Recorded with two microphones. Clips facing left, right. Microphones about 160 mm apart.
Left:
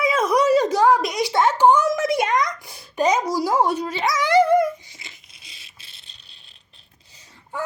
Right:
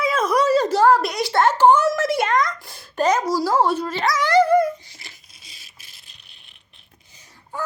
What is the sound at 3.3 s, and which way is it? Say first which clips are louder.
Dog: right 1 dB; 15° left (ahead or behind).